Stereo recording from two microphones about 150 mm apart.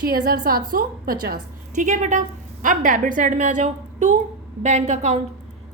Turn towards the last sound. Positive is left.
turn(degrees=-50)  # may be behind; listen again after turning